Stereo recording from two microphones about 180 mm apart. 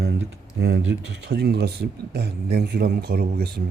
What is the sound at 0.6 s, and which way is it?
Speech, 70° right (ahead or behind).